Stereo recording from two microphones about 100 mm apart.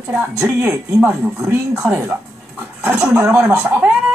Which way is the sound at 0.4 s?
15° right (ahead or behind).